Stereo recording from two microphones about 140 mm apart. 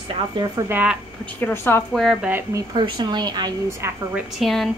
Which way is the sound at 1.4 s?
15° left (ahead or behind).